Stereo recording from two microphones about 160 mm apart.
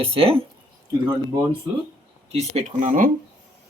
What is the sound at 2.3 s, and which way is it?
Speech, 50° right (ahead or behind).